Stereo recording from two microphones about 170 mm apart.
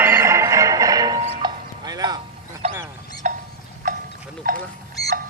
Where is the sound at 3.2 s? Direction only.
45° right (ahead or behind).